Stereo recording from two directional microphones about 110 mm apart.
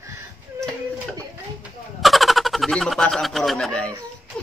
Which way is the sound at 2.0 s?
Centre (ahead or behind).